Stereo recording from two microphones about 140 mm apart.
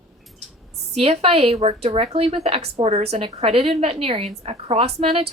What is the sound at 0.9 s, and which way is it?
A woman's voice, 45° right (ahead or behind).